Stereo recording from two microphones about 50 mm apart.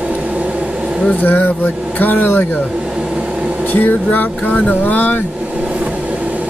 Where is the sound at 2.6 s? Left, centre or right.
Centre.